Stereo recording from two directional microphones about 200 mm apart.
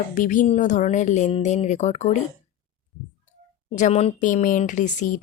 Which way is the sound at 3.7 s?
35° left (ahead or behind).